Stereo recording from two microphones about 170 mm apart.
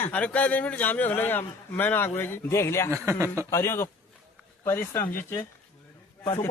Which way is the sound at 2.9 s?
15° right (ahead or behind).